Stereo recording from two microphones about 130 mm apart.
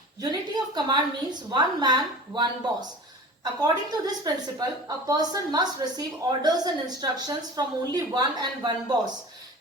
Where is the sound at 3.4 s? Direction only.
30° right (ahead or behind).